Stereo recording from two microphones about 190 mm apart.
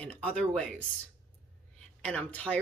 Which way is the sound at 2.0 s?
5° left (ahead or behind).